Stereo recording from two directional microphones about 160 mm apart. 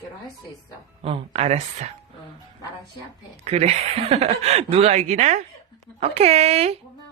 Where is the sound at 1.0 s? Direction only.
40° right (ahead or behind).